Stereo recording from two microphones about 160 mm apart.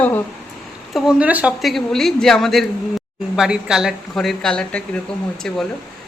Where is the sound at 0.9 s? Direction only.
5° right (ahead or behind).